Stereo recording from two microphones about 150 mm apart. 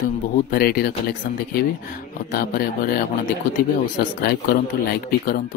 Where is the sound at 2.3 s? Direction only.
90° left.